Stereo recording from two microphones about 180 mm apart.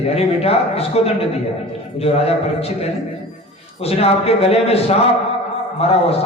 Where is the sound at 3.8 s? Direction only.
35° left (ahead or behind).